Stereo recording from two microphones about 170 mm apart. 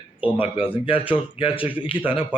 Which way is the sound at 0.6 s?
30° left (ahead or behind).